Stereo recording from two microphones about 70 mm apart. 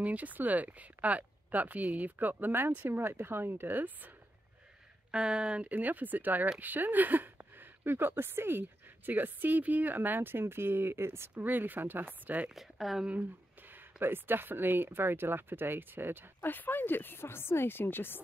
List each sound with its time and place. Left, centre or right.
0.0 s speech: right
5.1 s speech: centre
12.4 s speech: centre
13.2 s speech: right
16.3 s speech: left